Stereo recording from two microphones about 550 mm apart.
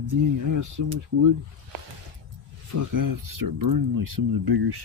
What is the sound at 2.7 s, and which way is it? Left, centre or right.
Speech, right.